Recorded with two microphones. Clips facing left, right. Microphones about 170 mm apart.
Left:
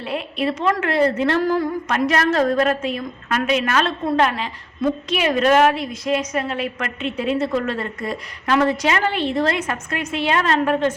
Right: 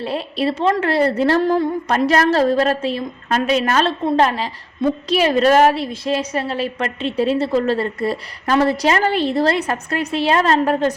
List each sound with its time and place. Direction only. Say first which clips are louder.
0.0 s a woman's voice: right 2 dB; 35° right (ahead or behind)